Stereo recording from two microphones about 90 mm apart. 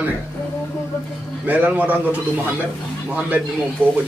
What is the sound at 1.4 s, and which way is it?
Speech, 20° right (ahead or behind).